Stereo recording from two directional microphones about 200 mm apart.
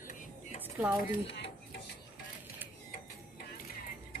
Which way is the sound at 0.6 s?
10° right (ahead or behind).